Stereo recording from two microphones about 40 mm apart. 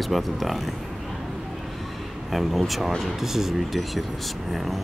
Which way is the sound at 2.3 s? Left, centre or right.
Centre.